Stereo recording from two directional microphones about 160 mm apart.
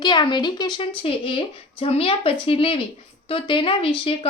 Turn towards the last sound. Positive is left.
turn(degrees=35)  # may be behind; listen again after turning